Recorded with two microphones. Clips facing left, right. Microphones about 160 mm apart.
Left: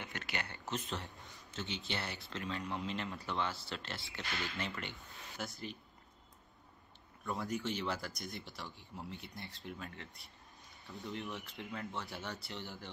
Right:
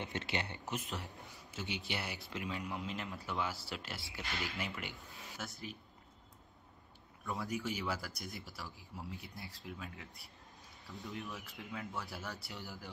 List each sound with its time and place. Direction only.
0.0 s speech: 25° right (ahead or behind)
0.7 s a man's voice: 5° right (ahead or behind)
7.2 s speech: centre (ahead or behind)